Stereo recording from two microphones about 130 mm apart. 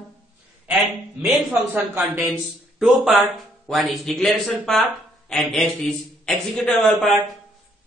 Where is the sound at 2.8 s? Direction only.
5° right (ahead or behind).